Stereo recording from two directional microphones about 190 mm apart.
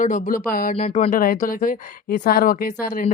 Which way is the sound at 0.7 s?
35° left (ahead or behind).